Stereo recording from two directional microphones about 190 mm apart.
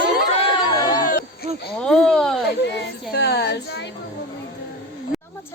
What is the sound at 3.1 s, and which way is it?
Child singing, 60° left (ahead or behind).